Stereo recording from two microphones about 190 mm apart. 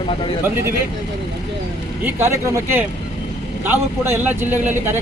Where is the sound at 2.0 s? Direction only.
15° right (ahead or behind).